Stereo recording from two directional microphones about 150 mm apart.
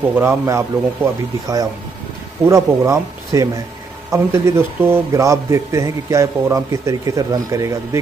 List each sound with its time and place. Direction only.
0.1 s a man's voice: 15° right (ahead or behind)